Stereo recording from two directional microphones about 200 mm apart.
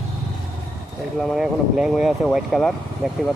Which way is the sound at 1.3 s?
5° right (ahead or behind).